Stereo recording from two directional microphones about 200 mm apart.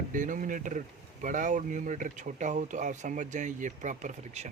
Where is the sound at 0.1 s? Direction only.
40° right (ahead or behind).